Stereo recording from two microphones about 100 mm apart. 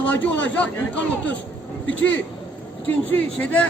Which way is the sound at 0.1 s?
15° left (ahead or behind).